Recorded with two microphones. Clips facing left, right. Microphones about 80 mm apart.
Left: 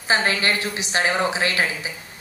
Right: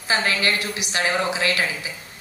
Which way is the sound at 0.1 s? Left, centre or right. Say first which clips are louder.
Left 1 dB; left.